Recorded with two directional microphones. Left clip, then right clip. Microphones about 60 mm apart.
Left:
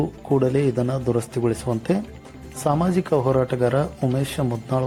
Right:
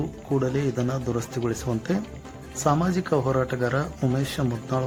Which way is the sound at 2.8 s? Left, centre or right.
Left.